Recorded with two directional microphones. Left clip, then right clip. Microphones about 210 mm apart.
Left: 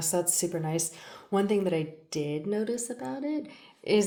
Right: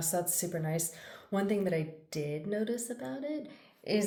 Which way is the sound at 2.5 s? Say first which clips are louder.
Left 4 dB; 25° left (ahead or behind).